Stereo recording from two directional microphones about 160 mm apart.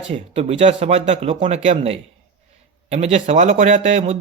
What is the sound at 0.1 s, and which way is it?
A man's voice, 40° right (ahead or behind).